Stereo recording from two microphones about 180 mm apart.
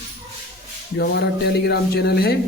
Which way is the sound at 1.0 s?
65° left (ahead or behind).